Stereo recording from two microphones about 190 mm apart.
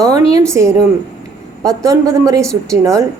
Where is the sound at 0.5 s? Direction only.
15° right (ahead or behind).